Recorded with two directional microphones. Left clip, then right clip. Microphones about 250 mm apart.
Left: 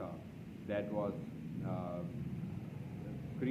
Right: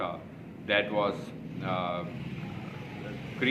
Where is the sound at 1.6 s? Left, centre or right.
Centre.